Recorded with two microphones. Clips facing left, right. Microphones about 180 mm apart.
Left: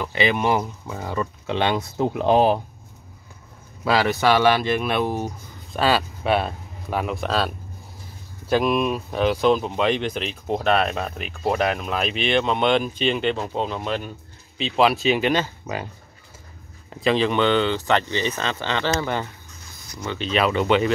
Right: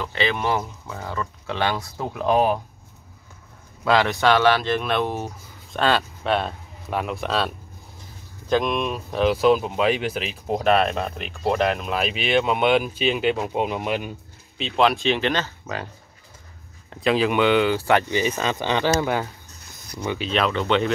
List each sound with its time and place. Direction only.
0.0 s speech: 15° left (ahead or behind)
3.8 s speech: 5° left (ahead or behind); by 14.1 s 15° right (ahead or behind)
14.6 s speech: 5° left (ahead or behind)
16.9 s speech: centre (ahead or behind)
20.2 s speech: 5° left (ahead or behind)